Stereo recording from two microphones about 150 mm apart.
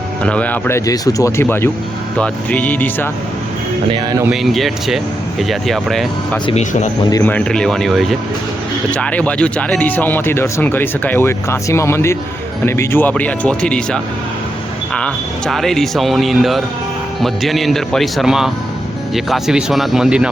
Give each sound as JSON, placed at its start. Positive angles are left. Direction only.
{"t": 0.2, "sound": "speech", "side_deg": 10}
{"t": 0.9, "sound": "speech", "side_deg": 20}
{"t": 4.3, "sound": "speech", "side_deg": 0}
{"t": 6.4, "sound": "speech", "side_deg": 45}
{"t": 7.1, "sound": "speech", "side_deg": 15}